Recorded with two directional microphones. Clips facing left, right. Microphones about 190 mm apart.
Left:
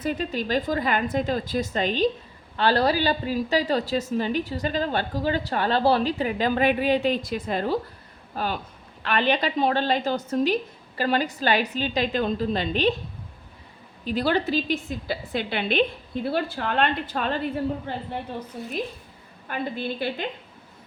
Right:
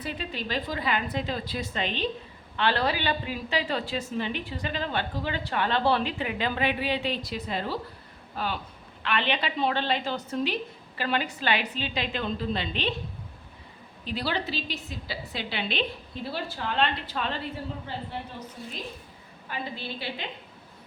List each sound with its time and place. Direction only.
0.0 s a woman's voice: 45° left (ahead or behind)
14.0 s a woman's voice: 45° left (ahead or behind)